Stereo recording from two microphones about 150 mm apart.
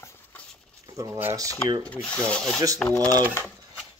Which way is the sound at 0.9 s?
20° right (ahead or behind).